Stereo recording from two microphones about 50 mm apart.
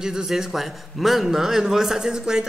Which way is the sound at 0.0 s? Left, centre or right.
Centre.